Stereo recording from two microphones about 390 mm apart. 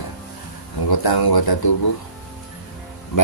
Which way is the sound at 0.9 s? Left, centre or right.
Left.